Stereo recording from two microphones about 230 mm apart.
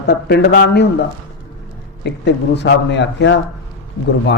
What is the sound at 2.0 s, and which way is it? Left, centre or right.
A man's voice, left.